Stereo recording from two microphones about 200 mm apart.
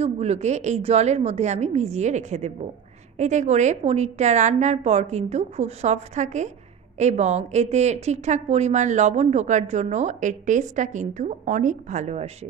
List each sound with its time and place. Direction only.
0.0 s speech: 30° right (ahead or behind)